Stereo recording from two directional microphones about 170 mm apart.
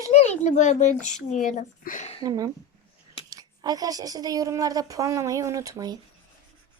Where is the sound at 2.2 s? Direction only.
20° right (ahead or behind).